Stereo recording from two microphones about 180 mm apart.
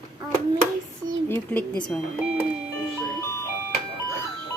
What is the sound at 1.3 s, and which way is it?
Speech, 10° left (ahead or behind).